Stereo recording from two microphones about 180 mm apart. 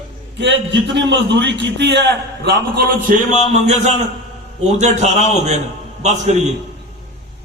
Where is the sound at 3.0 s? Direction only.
40° right (ahead or behind).